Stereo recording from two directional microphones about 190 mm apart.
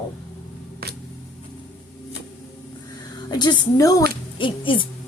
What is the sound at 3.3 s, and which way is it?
Speech, 20° left (ahead or behind).